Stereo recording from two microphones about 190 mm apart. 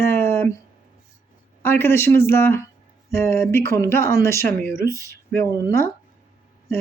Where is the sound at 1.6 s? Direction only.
10° left (ahead or behind).